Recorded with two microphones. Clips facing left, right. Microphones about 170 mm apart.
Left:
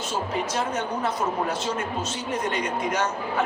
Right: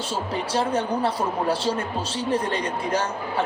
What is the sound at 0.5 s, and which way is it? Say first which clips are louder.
Speech: right 4 dB; 30° right (ahead or behind).